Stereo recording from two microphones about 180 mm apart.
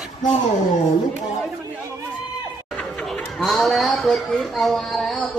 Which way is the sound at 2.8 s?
5° left (ahead or behind).